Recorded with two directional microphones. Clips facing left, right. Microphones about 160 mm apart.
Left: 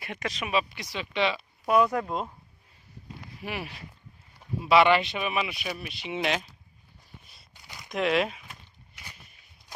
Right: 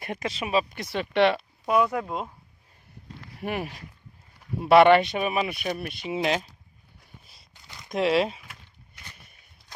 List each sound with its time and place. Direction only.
0.2 s speech: 30° right (ahead or behind)
0.7 s speech: 50° right (ahead or behind)
1.7 s speech: 5° right (ahead or behind)
3.3 s speech: 50° right (ahead or behind)
6.1 s speech: 35° right (ahead or behind)
7.5 s a sound: 15° left (ahead or behind)
7.9 s speech: 30° right (ahead or behind)